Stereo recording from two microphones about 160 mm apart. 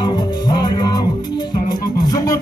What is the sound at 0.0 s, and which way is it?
Music, 30° left (ahead or behind).